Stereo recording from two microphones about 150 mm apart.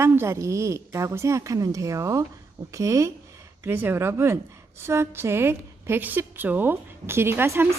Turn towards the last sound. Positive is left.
turn(degrees=-15)  # may be behind; listen again after turning